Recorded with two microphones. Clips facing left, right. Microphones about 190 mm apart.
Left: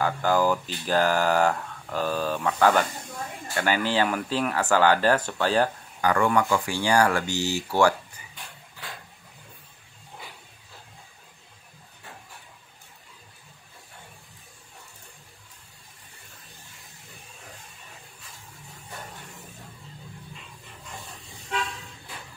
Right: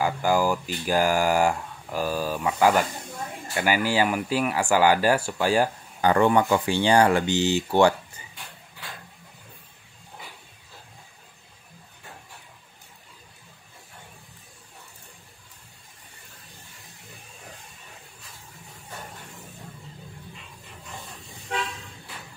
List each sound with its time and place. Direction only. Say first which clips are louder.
0.0 s speech: even; 10° right (ahead or behind)
5.9 s speech: right 3 dB; 25° right (ahead or behind)